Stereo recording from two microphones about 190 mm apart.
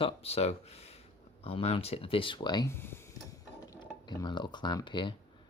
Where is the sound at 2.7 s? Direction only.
10° left (ahead or behind).